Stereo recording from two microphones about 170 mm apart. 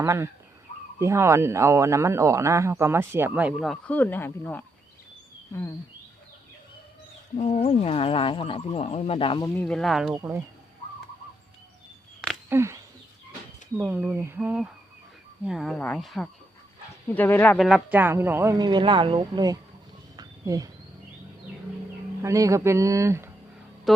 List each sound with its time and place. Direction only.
0.0 s speech: 15° right (ahead or behind); by 4.6 s 10° left (ahead or behind)
7.3 s speech: 40° left (ahead or behind)
9.6 s speech: 5° left (ahead or behind)
10.2 s speech: 15° right (ahead or behind)
12.5 s speech: 15° right (ahead or behind); by 17.6 s 10° left (ahead or behind)
17.6 s speech: centre (ahead or behind)
18.5 s speech: 25° right (ahead or behind)
20.1 s a sound: 20° right (ahead or behind)
22.2 s speech: 20° right (ahead or behind)